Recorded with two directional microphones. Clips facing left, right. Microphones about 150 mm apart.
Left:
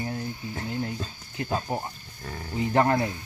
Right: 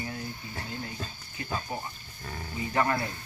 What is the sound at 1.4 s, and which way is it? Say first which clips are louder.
Speech: left 6 dB; 60° left (ahead or behind).